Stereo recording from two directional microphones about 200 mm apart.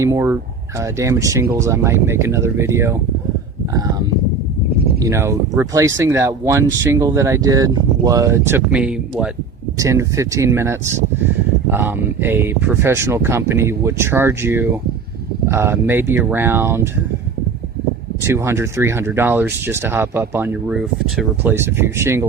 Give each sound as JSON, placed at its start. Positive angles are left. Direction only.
{"t": 0.0, "sound": "speech", "side_deg": -15}
{"t": 5.0, "sound": "speech", "side_deg": -15}
{"t": 18.2, "sound": "speech", "side_deg": -15}